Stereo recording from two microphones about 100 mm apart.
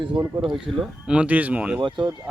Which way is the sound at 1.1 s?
15° right (ahead or behind).